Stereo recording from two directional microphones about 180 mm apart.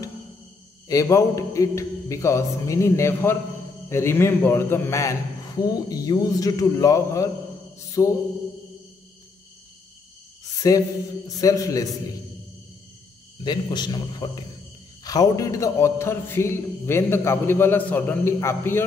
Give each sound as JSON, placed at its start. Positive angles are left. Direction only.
{"t": 0.8, "sound": "a man's voice", "side_deg": 15}
{"t": 10.6, "sound": "speech", "side_deg": 20}
{"t": 13.4, "sound": "a man's voice", "side_deg": 25}